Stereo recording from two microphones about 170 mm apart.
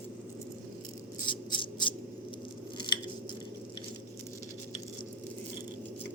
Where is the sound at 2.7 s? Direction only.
25° left (ahead or behind).